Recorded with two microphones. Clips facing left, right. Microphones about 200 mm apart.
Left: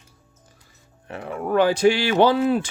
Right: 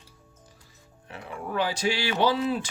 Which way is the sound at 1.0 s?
55° left (ahead or behind).